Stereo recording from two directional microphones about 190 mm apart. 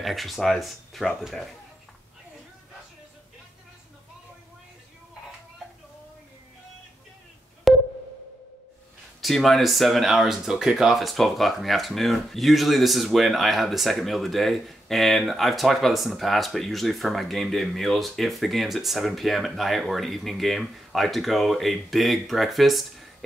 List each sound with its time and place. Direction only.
0.0 s speech: centre (ahead or behind)
7.7 s a sound: centre (ahead or behind)
9.2 s speech: centre (ahead or behind)